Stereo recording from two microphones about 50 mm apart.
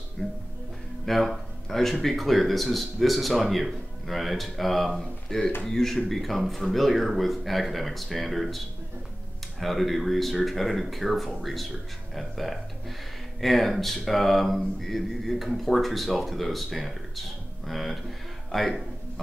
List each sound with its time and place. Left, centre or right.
0.2 s music: left
1.0 s speech: centre